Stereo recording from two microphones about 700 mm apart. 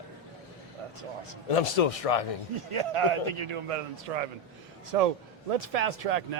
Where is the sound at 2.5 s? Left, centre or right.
Right.